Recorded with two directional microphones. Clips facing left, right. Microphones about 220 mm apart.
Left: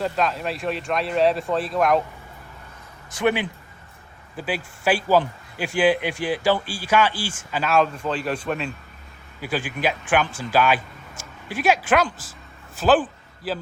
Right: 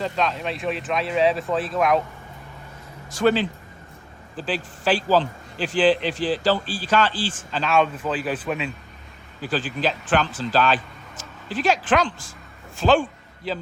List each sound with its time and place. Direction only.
0.0 s speech: 5° left (ahead or behind)
3.2 s speech: 15° left (ahead or behind); by 8.7 s centre (ahead or behind)
9.4 s a man's voice: 10° left (ahead or behind)